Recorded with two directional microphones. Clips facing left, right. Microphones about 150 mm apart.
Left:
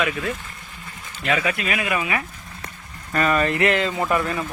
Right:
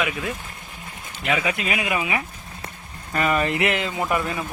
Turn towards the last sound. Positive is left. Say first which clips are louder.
# left 2 dB
turn(degrees=-15)  # may be behind; listen again after turning